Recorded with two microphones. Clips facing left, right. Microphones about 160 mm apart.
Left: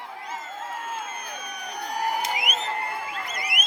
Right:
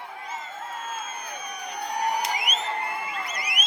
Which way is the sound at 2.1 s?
5° left (ahead or behind).